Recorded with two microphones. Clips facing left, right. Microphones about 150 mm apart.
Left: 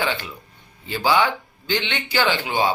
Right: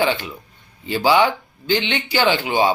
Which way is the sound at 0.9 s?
15° right (ahead or behind).